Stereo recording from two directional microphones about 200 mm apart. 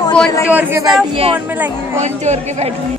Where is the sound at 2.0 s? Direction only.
35° right (ahead or behind).